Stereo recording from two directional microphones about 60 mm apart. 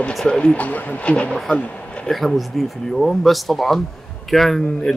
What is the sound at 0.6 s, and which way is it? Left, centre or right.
Speech, left.